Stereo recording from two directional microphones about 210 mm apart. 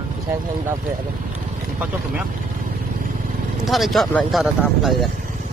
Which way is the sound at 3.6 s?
Centre (ahead or behind).